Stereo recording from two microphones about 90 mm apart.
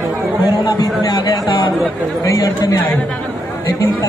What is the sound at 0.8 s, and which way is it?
Speech, 50° left (ahead or behind).